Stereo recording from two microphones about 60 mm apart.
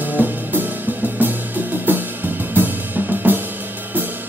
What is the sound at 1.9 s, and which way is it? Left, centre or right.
Cymbal, right.